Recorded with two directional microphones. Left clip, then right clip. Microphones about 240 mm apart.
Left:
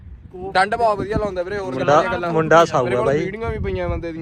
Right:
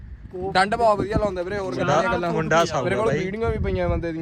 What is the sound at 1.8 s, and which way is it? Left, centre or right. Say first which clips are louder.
Speech: left 6 dB; centre.